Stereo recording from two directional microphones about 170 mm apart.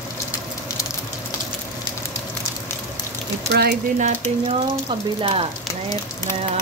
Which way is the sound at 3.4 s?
70° right (ahead or behind).